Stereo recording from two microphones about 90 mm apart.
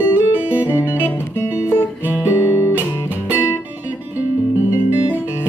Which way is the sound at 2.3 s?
30° left (ahead or behind).